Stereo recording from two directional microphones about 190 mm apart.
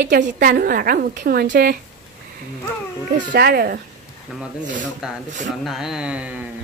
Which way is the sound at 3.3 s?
55° right (ahead or behind).